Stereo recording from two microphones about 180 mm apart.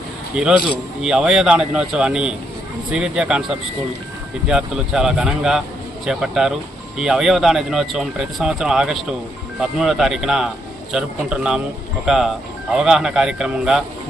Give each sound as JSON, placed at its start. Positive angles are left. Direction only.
{"t": 0.4, "sound": "speech", "side_deg": -5}
{"t": 4.4, "sound": "speech", "side_deg": -5}